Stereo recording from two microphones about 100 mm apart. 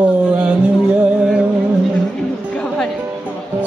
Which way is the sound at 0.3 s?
10° right (ahead or behind).